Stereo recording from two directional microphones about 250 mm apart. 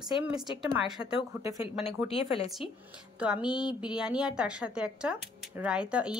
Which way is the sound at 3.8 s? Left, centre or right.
Centre.